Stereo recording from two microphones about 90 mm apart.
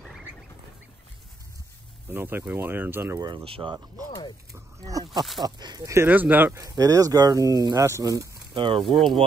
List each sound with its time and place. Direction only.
2.0 s speech: 25° right (ahead or behind)
3.4 s speech: 90° right
4.5 s speech: 40° right (ahead or behind)
5.4 s speech: 55° right (ahead or behind)
6.0 s speech: 20° right (ahead or behind)
6.5 s speech: 40° right (ahead or behind)
8.5 s speech: 65° right (ahead or behind)
8.8 s speech: centre (ahead or behind)